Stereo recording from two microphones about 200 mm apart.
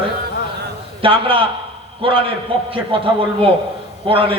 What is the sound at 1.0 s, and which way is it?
A man's voice, 25° right (ahead or behind).